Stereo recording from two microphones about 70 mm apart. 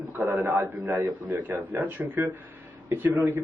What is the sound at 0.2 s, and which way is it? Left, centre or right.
Speech, right.